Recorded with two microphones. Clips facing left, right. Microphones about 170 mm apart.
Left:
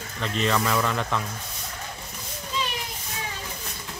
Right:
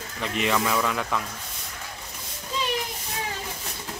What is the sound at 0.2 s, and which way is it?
Speech, 15° right (ahead or behind).